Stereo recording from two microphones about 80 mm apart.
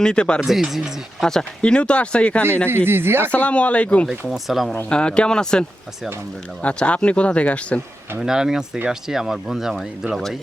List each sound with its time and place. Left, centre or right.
0.0 s speech: centre
0.3 s speech: centre
1.2 s speech: centre
2.6 s speech: right
3.3 s speech: centre
4.3 s speech: centre
4.9 s speech: centre
8.2 s speech: centre